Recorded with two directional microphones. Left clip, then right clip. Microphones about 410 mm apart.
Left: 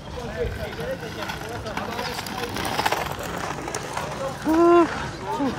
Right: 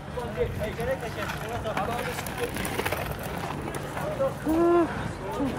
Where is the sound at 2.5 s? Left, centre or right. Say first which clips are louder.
Left 6 dB; centre.